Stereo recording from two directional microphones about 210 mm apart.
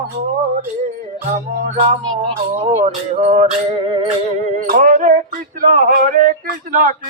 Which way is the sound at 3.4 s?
25° right (ahead or behind).